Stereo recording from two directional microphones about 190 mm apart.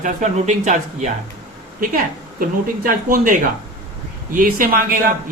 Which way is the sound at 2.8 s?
45° right (ahead or behind).